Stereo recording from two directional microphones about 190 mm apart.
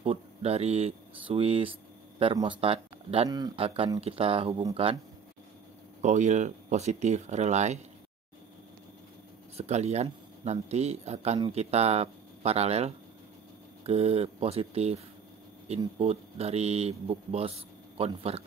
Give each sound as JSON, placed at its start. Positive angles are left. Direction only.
{"t": 0.0, "sound": "speech", "side_deg": -35}
{"t": 6.0, "sound": "speech", "side_deg": -40}
{"t": 9.6, "sound": "speech", "side_deg": -35}
{"t": 16.0, "sound": "speech", "side_deg": -35}